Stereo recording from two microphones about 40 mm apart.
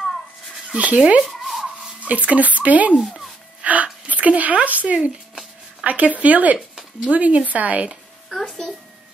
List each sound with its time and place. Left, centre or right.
0.7 s speech: right
1.2 s zipper: centre
2.0 s speech: right
3.6 s a sound: right
4.6 s speech: right
8.3 s a child's voice: centre